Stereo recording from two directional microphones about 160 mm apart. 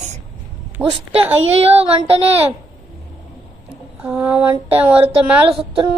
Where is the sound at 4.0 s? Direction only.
5° right (ahead or behind).